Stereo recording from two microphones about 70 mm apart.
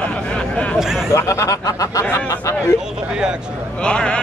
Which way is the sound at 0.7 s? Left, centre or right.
Centre.